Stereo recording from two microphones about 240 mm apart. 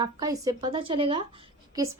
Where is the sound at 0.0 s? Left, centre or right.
Centre.